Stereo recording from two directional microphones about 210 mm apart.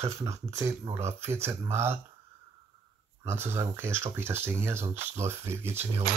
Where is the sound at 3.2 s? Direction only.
10° right (ahead or behind).